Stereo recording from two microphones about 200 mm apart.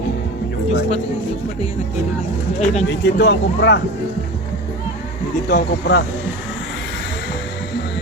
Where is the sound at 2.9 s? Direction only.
60° left (ahead or behind).